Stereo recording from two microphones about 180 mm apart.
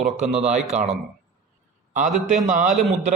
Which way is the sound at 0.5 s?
40° right (ahead or behind).